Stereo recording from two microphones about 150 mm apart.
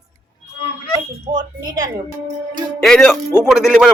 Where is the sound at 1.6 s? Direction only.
25° right (ahead or behind).